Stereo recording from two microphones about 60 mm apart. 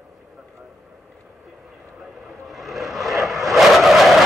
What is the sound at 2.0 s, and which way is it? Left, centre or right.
Vehicle, centre.